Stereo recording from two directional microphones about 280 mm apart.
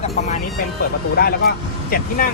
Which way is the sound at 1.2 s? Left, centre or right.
Left.